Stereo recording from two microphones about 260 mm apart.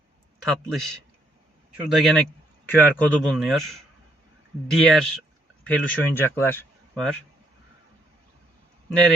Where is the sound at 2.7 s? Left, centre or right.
Centre.